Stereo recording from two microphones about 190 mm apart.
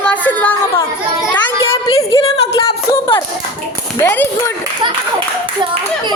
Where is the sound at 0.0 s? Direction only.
10° left (ahead or behind).